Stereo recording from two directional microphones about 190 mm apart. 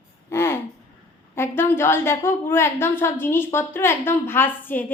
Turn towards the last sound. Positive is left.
turn(degrees=10)  # may be behind; listen again after turning